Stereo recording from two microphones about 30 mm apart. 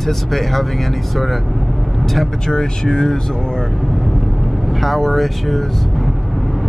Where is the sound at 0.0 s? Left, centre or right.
Centre.